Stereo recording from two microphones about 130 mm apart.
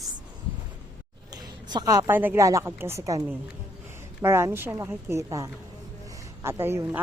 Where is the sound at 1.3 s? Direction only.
35° right (ahead or behind).